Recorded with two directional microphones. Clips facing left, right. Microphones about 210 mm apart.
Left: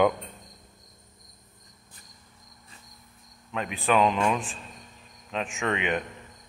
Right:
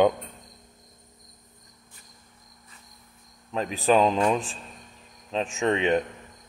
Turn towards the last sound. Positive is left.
turn(degrees=-30)  # may be behind; listen again after turning